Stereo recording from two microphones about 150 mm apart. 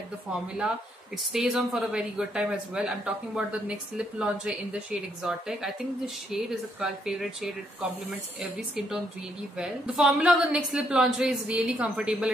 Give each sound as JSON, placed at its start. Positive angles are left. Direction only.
{"t": 0.6, "sound": "speech", "side_deg": -5}